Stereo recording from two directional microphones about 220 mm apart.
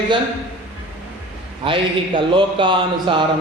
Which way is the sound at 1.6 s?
25° right (ahead or behind).